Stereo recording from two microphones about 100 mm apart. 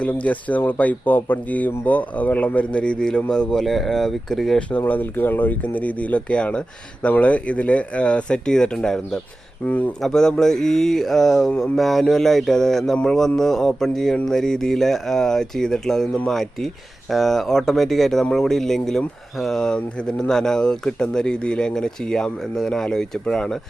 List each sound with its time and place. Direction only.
0.0 s speech: 15° left (ahead or behind)
4.9 s speech: 20° left (ahead or behind)